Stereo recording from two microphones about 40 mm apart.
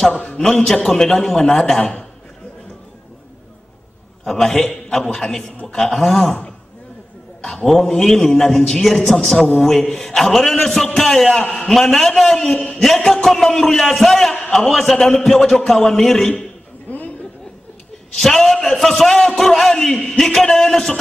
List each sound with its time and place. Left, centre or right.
0.4 s a man's voice: centre
1.8 s a man's voice: left
4.2 s a man's voice: centre
7.4 s a man's voice: centre
18.1 s a man's voice: centre